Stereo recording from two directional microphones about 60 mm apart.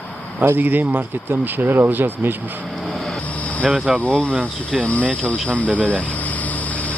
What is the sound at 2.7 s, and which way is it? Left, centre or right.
Vehicle, centre.